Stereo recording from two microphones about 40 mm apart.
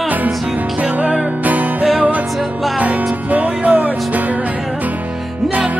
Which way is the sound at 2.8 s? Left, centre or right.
Right.